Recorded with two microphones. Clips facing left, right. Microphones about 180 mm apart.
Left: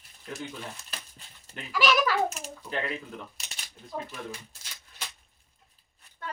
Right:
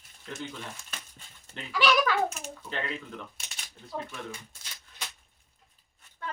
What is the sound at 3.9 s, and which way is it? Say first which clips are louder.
Speech: left 1 dB; centre (ahead or behind).